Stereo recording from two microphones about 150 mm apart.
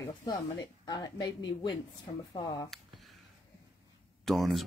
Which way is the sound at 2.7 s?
Centre (ahead or behind).